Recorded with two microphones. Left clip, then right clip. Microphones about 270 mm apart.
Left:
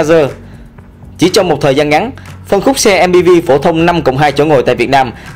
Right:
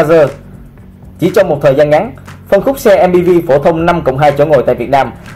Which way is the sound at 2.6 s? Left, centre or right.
Left.